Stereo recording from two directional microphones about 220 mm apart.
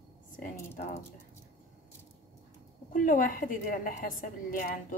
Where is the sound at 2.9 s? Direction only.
35° left (ahead or behind).